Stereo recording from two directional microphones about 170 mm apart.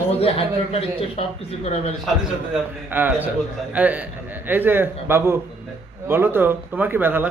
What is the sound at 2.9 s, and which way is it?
Speech, 10° right (ahead or behind).